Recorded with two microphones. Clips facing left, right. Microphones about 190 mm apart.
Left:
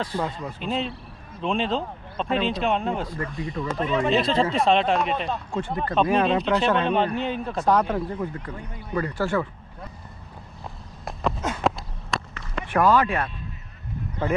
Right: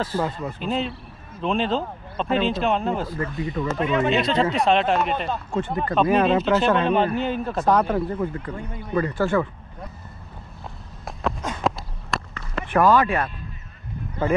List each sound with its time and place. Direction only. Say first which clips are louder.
0.0 s speech: right 3 dB; 5° right (ahead or behind)
9.1 s speech: right 2 dB; 10° left (ahead or behind)
11.1 s a sound: left 1 dB; centre (ahead or behind)
13.0 s speech: right 2 dB; 5° right (ahead or behind)